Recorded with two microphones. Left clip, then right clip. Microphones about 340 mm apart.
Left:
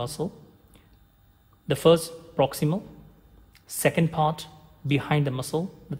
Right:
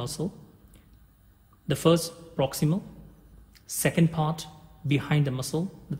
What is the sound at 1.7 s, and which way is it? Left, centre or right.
Speech, left.